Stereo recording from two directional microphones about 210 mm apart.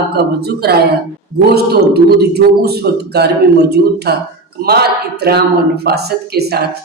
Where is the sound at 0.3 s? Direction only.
50° right (ahead or behind).